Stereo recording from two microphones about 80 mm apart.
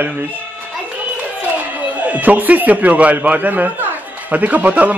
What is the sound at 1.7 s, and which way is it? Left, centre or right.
Speech, centre.